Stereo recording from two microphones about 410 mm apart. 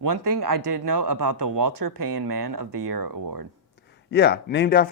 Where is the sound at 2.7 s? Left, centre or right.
Right.